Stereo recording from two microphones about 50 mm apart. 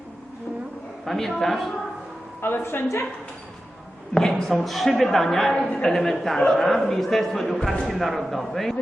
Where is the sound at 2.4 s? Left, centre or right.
Left.